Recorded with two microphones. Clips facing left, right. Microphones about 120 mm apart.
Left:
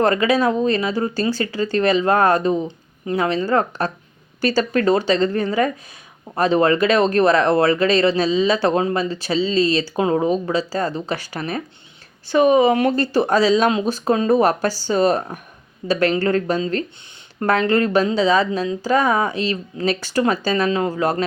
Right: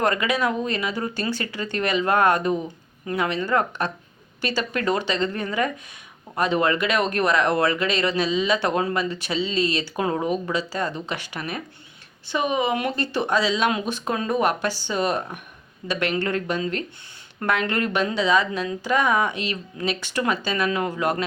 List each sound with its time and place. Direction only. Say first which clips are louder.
0.0 s speech: left 6 dB; 30° left (ahead or behind)